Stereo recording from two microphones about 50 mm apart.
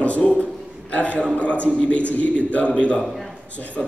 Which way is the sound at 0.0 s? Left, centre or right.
Left.